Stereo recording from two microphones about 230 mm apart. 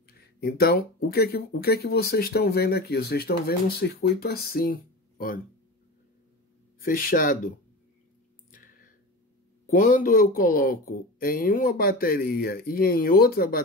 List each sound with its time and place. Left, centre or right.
0.4 s speech: left
6.8 s speech: left
8.5 s a sound: left
9.7 s speech: left